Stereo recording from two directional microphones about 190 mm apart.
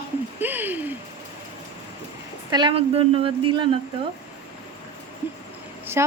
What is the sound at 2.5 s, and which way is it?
A woman's voice, 25° right (ahead or behind).